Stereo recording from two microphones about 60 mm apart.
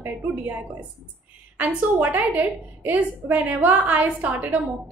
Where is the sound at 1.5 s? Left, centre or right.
Right.